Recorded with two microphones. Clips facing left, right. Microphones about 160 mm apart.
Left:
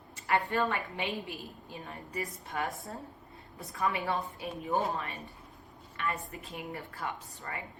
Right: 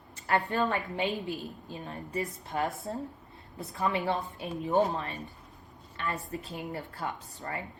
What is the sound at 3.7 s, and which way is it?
Speech, 25° right (ahead or behind).